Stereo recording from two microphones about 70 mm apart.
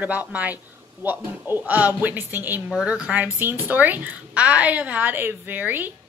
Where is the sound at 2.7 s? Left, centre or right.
Centre.